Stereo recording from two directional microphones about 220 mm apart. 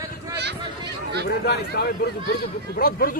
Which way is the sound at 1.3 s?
45° left (ahead or behind).